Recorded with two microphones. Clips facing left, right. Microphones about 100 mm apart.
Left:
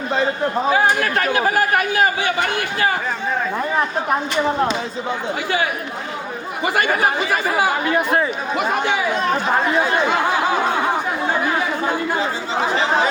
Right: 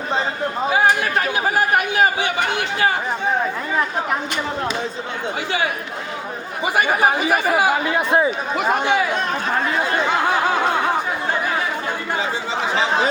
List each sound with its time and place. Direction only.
2.2 s a man's voice: 25° right (ahead or behind)
6.7 s a man's voice: 15° right (ahead or behind)